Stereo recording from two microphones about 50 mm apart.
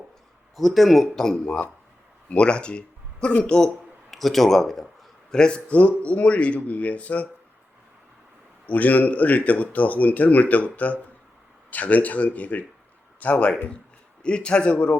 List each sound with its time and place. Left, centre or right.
0.5 s speech: centre
1.1 s a man's voice: centre
4.1 s speech: centre
5.3 s speech: centre
8.6 s a man's voice: left
14.2 s speech: centre